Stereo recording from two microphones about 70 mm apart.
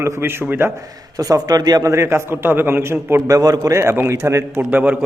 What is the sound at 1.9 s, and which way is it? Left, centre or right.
A man's voice, right.